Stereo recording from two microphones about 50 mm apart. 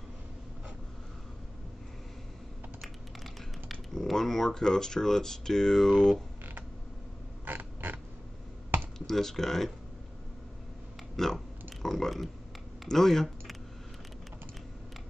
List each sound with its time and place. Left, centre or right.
3.6 s speech: centre
7.4 s creak: right
8.9 s speech: centre
11.1 s speech: centre